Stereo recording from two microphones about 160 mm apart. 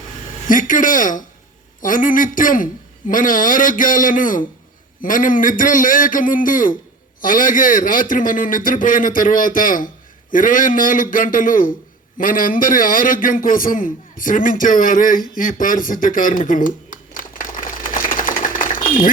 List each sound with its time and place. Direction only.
0.4 s a man's voice: 55° left (ahead or behind)